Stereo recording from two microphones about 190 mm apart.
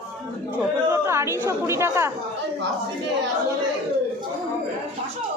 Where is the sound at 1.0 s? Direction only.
15° right (ahead or behind).